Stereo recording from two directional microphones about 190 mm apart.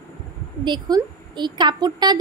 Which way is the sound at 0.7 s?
20° right (ahead or behind).